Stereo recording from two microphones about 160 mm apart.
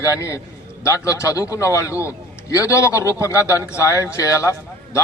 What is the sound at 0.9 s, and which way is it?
A man's voice, 20° left (ahead or behind).